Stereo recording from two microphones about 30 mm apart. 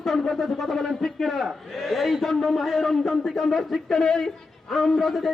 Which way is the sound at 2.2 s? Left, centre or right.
Centre.